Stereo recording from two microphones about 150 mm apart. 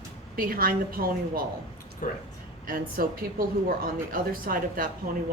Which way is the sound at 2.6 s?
70° right (ahead or behind).